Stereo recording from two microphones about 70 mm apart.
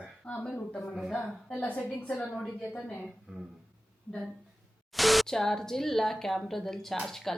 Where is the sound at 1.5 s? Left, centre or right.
Left.